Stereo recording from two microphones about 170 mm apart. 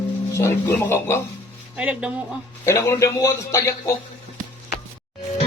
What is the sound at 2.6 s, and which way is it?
A man's voice, 15° left (ahead or behind).